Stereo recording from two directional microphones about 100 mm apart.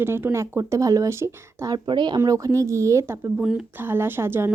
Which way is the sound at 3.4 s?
10° right (ahead or behind).